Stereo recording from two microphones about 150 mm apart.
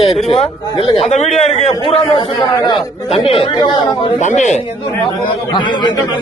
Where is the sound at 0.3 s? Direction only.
40° left (ahead or behind).